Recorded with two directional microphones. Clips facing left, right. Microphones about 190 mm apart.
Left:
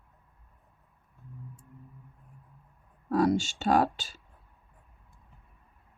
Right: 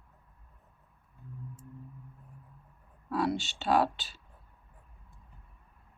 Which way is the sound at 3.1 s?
45° left (ahead or behind).